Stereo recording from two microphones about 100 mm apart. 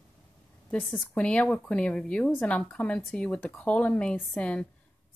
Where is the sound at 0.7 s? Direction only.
15° left (ahead or behind).